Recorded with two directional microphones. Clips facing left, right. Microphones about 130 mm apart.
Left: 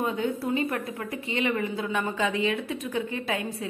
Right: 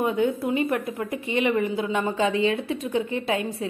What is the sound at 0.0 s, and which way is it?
A woman's voice, 25° right (ahead or behind).